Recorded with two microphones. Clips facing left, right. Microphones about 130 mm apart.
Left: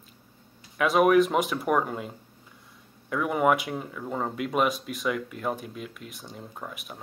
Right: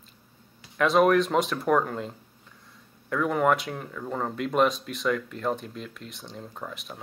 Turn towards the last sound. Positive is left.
turn(degrees=5)  # may be behind; listen again after turning